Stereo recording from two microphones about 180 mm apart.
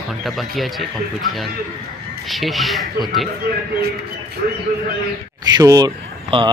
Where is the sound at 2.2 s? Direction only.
Centre (ahead or behind).